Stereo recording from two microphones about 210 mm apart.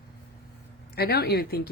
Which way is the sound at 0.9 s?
50° left (ahead or behind).